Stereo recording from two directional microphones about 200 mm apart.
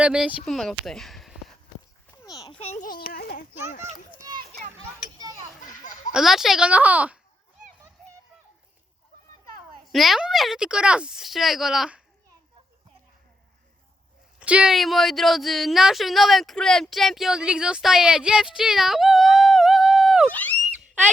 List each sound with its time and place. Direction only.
0.0 s speech: 5° right (ahead or behind)
2.2 s a sound: 20° left (ahead or behind)
2.6 s speech: 35° left (ahead or behind)
4.2 s children playing: 20° right (ahead or behind)
6.1 s a woman's voice: centre (ahead or behind)
9.9 s a woman's voice: centre (ahead or behind)
14.3 s a woman's voice: 5° right (ahead or behind)